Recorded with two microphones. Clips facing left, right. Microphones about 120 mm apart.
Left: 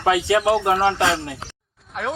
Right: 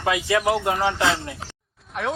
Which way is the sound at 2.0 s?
Centre (ahead or behind).